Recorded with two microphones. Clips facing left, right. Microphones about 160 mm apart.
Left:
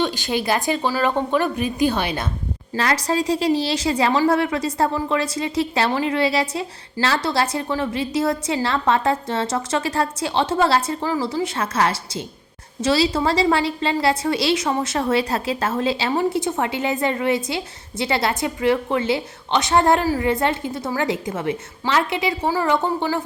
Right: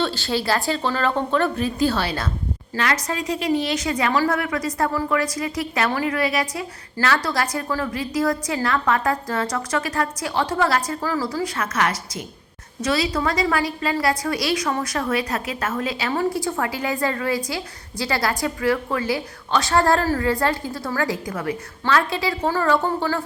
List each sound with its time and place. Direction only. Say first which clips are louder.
0.0 s a woman's voice: left 1 dB; 15° left (ahead or behind)
2.7 s a woman's voice: left 4 dB; 35° left (ahead or behind)